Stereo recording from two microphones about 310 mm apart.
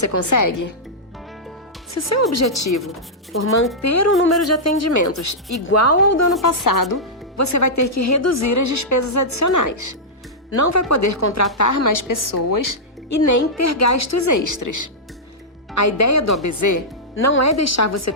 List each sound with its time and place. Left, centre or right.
0.0 s a woman's voice: left
0.3 s a woman's voice: left
1.9 s a woman's voice: left
6.4 s speech: left
6.9 s speech: left
10.6 s a woman's voice: left
15.7 s speech: left
17.4 s speech: left